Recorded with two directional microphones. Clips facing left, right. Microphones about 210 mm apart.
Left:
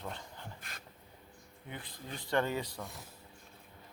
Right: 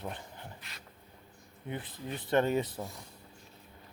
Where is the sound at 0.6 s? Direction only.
50° left (ahead or behind).